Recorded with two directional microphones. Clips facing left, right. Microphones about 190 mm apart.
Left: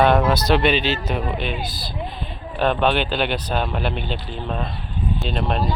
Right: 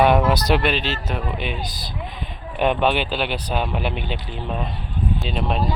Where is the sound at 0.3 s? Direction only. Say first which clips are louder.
Left 2 dB; 10° right (ahead or behind).